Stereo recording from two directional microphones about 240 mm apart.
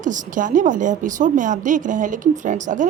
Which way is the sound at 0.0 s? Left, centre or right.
Right.